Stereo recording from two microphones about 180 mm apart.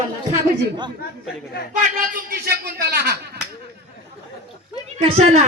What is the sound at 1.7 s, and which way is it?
Speech, 45° right (ahead or behind).